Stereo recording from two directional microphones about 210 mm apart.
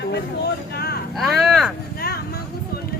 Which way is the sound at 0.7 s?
50° left (ahead or behind).